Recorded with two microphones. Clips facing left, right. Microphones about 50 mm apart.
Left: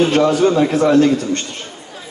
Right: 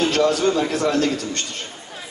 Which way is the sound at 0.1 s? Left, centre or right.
Left.